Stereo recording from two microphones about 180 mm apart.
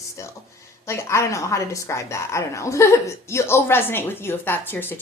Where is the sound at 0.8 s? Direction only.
15° left (ahead or behind).